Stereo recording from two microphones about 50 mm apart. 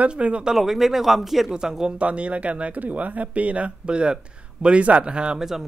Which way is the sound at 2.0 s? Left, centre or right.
Right.